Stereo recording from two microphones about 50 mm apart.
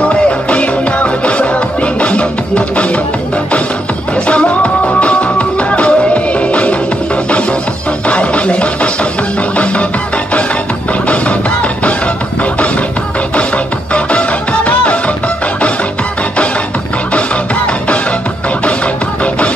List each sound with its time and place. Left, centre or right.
0.1 s music: left
4.3 s music: left
8.1 s music: left
11.1 s music: left
13.9 s music: left